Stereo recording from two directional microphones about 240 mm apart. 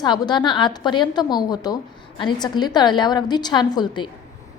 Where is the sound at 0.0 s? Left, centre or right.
Centre.